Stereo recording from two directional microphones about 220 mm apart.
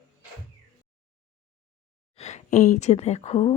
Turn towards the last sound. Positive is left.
turn(degrees=30)  # may be behind; listen again after turning